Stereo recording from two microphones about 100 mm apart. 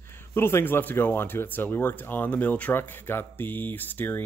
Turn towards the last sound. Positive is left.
turn(degrees=20)  # may be behind; listen again after turning